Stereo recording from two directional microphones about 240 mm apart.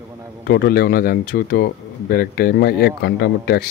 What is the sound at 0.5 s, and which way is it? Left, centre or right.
Speech, left.